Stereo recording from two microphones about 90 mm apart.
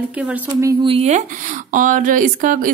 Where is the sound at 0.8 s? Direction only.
80° right.